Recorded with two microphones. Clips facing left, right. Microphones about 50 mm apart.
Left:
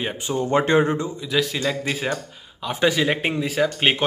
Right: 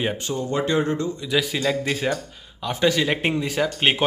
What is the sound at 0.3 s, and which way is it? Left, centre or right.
Speech, left.